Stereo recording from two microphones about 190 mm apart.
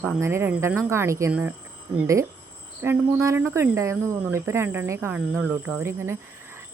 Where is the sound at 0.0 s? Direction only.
15° right (ahead or behind).